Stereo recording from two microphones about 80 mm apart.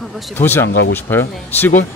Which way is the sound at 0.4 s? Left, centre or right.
Left.